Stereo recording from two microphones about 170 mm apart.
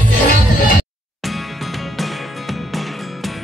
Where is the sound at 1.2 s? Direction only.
Centre (ahead or behind).